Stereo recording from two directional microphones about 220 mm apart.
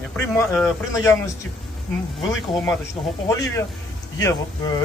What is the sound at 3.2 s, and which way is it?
Speech, 15° left (ahead or behind).